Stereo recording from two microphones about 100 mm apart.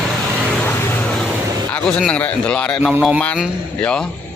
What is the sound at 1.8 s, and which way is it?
Speech, 10° left (ahead or behind).